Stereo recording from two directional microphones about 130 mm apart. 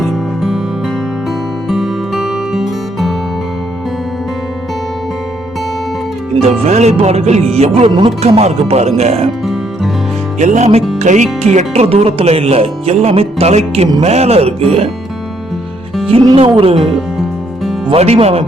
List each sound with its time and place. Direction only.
0.0 s music: centre (ahead or behind)
1.7 s music: centre (ahead or behind)
6.4 s music: 55° right (ahead or behind)
7.5 s speech: 50° right (ahead or behind)
7.9 s speech: 40° right (ahead or behind)
8.2 s music: 55° right (ahead or behind)
10.4 s music: 65° right (ahead or behind)
11.0 s speech: 65° right (ahead or behind); by 14.8 s 50° right (ahead or behind)
16.1 s speech: 45° right (ahead or behind)
17.8 s speech: 50° right (ahead or behind)